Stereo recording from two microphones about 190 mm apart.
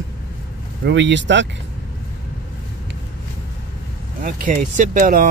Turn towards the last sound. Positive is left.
turn(degrees=-45)  # may be behind; listen again after turning